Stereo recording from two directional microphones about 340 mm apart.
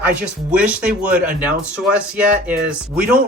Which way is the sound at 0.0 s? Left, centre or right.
Centre.